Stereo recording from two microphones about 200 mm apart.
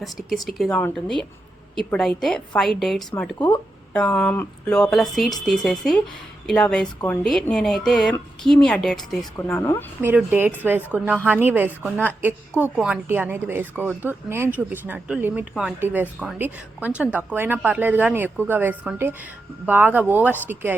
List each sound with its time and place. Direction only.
0.0 s speech: centre (ahead or behind)
3.3 s speech: 20° left (ahead or behind)
3.9 s speech: 5° left (ahead or behind)
9.6 s speech: 15° left (ahead or behind)
10.0 s speech: 10° right (ahead or behind)